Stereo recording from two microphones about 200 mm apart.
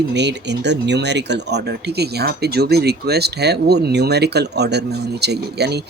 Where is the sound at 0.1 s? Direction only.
60° right (ahead or behind).